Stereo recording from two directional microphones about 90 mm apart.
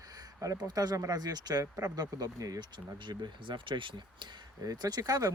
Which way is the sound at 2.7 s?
60° right (ahead or behind).